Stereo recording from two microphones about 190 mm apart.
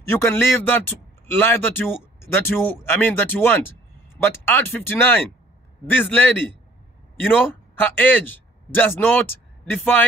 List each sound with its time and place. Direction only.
0.1 s a man's voice: 10° left (ahead or behind)